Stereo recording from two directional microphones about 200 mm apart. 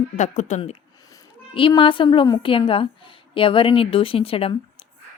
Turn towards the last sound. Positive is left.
turn(degrees=30)  # may be behind; listen again after turning